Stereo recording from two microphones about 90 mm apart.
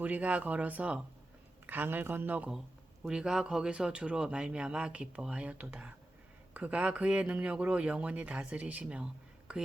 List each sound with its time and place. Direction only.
0.0 s speech: 15° right (ahead or behind)
3.1 s speech: 5° right (ahead or behind)